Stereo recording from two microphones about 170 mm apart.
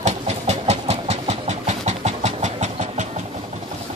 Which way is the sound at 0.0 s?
40° right (ahead or behind).